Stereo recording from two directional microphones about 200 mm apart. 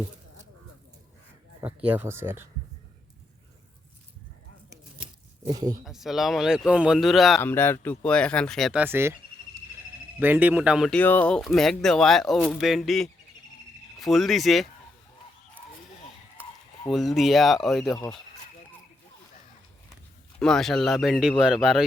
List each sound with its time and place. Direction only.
1.6 s speech: 10° right (ahead or behind)
5.5 s speech: 20° right (ahead or behind)
5.8 s speech: centre (ahead or behind)
7.4 s speech: 10° left (ahead or behind)
8.8 s speech: 10° right (ahead or behind)
10.2 s speech: 10° right (ahead or behind)
16.9 s speech: centre (ahead or behind)
20.4 s speech: centre (ahead or behind)